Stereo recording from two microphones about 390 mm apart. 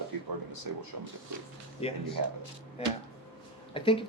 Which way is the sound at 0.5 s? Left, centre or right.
Right.